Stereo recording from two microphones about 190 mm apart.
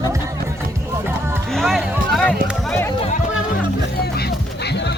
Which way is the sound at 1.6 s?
Centre (ahead or behind).